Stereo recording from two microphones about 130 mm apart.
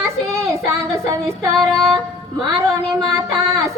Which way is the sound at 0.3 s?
25° right (ahead or behind).